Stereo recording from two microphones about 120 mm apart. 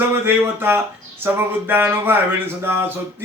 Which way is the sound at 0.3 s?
20° right (ahead or behind).